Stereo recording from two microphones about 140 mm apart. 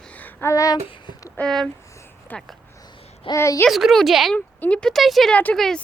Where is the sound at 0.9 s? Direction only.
35° left (ahead or behind).